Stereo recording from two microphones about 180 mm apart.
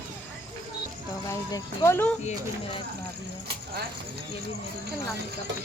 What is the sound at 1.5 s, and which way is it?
Speech, 15° left (ahead or behind).